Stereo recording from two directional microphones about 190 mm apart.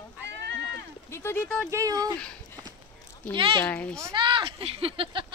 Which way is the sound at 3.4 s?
30° right (ahead or behind).